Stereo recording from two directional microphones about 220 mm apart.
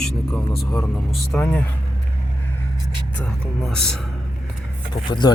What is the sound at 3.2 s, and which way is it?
Speech, 5° left (ahead or behind).